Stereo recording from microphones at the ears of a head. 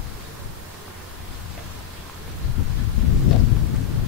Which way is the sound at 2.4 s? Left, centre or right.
Left.